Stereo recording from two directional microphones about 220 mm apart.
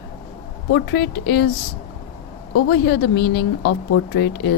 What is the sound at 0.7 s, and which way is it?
Speech, 45° left (ahead or behind).